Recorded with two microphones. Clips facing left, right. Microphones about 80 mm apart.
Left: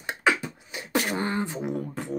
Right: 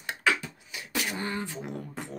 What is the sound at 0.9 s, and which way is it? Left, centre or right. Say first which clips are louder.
Beatboxing: left 6 dB; left.